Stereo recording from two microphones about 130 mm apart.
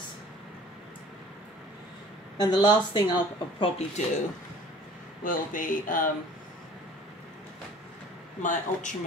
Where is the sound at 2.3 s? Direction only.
30° left (ahead or behind).